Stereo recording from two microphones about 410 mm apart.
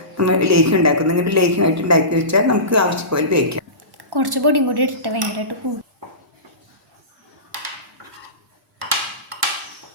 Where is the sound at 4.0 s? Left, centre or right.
Right.